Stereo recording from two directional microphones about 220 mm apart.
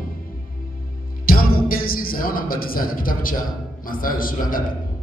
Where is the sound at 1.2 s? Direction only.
40° left (ahead or behind).